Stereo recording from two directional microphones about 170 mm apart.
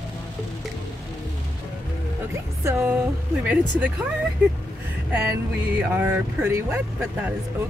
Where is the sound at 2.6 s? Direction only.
10° right (ahead or behind).